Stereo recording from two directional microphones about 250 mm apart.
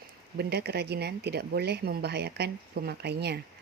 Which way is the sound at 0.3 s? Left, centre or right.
Right.